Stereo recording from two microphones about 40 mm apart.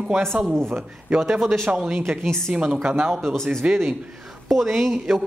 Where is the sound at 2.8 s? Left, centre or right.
Right.